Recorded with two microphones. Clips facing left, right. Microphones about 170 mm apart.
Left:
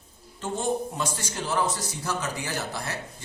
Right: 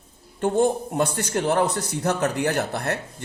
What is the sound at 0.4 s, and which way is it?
A man's voice, 60° right (ahead or behind).